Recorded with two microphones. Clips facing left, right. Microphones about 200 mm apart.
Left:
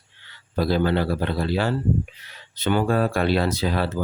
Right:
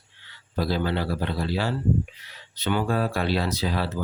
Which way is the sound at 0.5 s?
55° left (ahead or behind).